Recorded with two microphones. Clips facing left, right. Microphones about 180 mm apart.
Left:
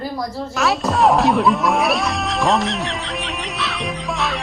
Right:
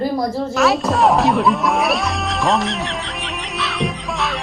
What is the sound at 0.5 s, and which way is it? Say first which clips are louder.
Music: right 2 dB; centre (ahead or behind).